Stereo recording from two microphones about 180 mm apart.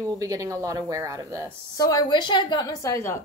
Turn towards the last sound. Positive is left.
turn(degrees=15)  # may be behind; listen again after turning